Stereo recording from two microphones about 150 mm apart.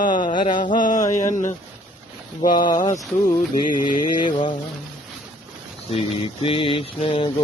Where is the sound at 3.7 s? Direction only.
65° left (ahead or behind).